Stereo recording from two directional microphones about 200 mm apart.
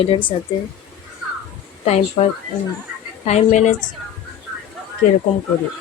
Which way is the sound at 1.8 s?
35° left (ahead or behind).